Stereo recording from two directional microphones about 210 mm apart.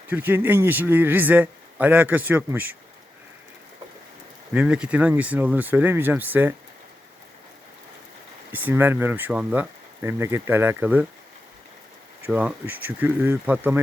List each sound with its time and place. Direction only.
0.1 s a man's voice: 10° right (ahead or behind)
4.5 s a man's voice: 5° right (ahead or behind)
8.5 s a man's voice: 10° right (ahead or behind)
12.2 s a man's voice: 5° right (ahead or behind)